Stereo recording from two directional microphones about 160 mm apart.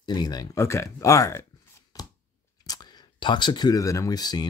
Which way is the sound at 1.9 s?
25° left (ahead or behind).